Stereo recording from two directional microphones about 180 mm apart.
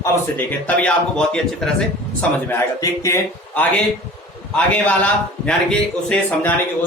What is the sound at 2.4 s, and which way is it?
A man's voice, 15° left (ahead or behind).